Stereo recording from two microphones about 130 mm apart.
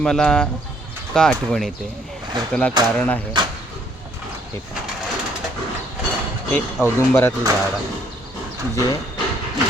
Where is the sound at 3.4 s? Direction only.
35° right (ahead or behind).